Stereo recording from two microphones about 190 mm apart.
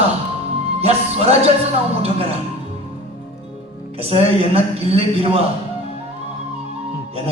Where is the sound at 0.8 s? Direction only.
35° right (ahead or behind).